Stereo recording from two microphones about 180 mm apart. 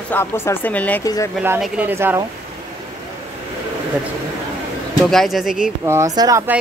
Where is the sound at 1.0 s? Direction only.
20° left (ahead or behind).